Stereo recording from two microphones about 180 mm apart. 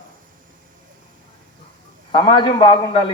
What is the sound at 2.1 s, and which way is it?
A man's voice, 25° left (ahead or behind).